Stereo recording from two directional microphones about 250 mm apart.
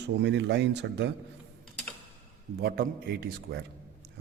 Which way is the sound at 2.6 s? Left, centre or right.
Right.